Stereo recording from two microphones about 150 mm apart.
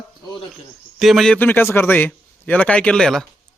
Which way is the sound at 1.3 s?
15° left (ahead or behind).